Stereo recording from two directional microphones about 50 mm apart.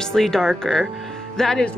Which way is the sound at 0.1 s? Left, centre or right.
Centre.